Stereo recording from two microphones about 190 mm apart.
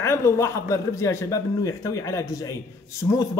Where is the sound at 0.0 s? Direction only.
15° left (ahead or behind).